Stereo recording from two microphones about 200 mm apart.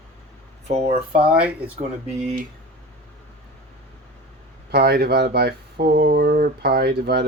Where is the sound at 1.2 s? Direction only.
5° right (ahead or behind).